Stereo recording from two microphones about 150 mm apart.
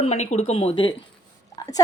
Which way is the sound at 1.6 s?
25° left (ahead or behind).